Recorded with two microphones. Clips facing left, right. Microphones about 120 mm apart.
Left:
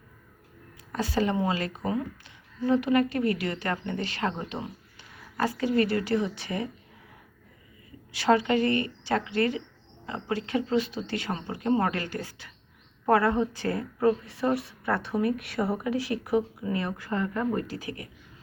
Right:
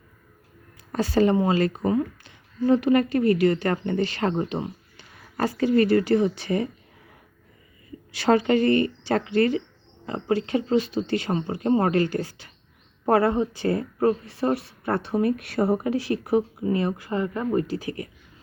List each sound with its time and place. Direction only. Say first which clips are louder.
0.9 s speech: right 6 dB; 40° right (ahead or behind)
8.2 s speech: right 3 dB; 35° right (ahead or behind); by 13.7 s 20° right (ahead or behind)
14.0 s speech: right 1 dB; 35° right (ahead or behind)